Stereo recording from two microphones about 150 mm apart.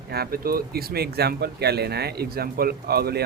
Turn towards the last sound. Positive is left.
turn(degrees=-90)